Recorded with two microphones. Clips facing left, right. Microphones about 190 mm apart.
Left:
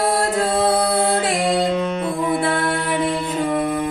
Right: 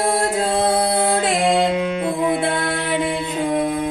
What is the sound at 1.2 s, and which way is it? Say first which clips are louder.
Music: right 2 dB; 25° right (ahead or behind).